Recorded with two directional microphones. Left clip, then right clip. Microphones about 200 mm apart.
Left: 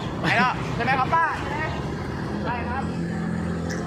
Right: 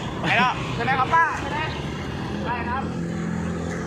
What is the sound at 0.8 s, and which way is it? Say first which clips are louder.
Speech: right 2 dB; 20° left (ahead or behind).